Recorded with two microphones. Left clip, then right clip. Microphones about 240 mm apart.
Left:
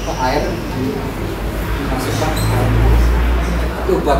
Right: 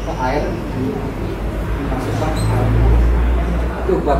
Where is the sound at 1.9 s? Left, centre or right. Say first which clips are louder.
Left 2 dB; centre.